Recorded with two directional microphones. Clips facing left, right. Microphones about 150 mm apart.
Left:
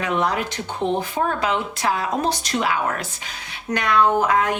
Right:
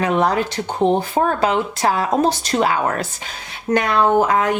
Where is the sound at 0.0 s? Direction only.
40° right (ahead or behind).